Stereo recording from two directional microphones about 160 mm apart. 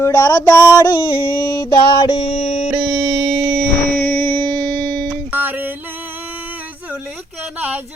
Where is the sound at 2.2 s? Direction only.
45° left (ahead or behind).